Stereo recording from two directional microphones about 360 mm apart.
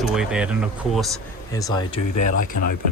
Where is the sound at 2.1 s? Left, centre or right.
Left.